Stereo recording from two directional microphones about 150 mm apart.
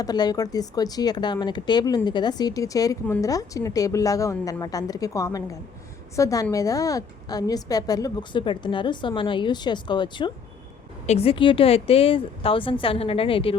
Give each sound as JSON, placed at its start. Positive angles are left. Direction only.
{"t": 0.0, "sound": "a woman's voice", "side_deg": 25}
{"t": 11.0, "sound": "speech", "side_deg": 45}